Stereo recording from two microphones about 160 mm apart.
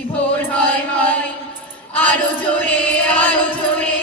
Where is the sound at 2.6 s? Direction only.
10° left (ahead or behind).